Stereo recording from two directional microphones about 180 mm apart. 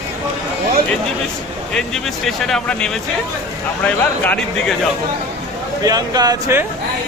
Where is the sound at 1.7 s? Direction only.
5° left (ahead or behind).